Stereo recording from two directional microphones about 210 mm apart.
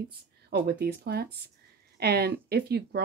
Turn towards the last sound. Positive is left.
turn(degrees=-50)  # may be behind; listen again after turning